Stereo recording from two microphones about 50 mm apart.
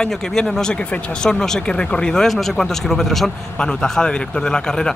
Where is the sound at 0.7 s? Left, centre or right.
Left.